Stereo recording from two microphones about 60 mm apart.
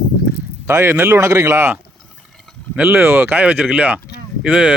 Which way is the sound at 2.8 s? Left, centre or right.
Right.